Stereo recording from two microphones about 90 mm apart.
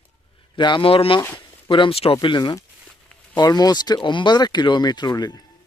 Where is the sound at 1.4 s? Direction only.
65° left (ahead or behind); by 2.1 s 85° left.